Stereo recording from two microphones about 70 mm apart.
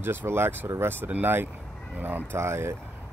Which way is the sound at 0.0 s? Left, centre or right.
Right.